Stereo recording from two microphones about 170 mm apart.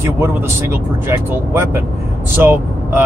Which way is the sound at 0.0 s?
15° right (ahead or behind).